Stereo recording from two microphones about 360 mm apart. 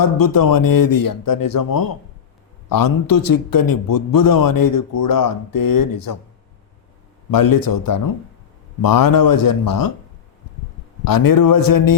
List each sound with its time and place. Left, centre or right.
0.0 s a man's voice: left
7.3 s a man's voice: left
11.0 s a man's voice: left